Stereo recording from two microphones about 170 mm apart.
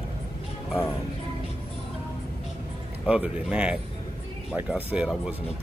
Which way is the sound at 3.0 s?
5° right (ahead or behind).